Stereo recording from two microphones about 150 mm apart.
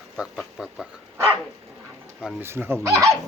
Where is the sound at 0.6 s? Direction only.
5° right (ahead or behind).